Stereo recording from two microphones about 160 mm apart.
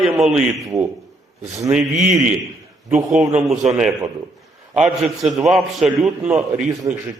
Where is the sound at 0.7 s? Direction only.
20° right (ahead or behind).